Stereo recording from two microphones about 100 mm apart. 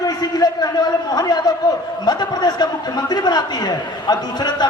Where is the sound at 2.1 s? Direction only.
45° left (ahead or behind).